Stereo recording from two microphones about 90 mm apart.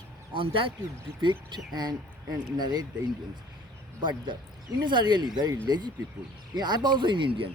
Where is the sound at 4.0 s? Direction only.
60° right (ahead or behind).